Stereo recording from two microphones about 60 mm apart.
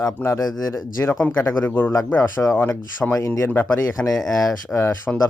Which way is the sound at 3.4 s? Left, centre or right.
Left.